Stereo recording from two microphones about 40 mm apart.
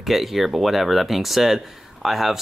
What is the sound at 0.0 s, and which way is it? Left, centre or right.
Speech, centre.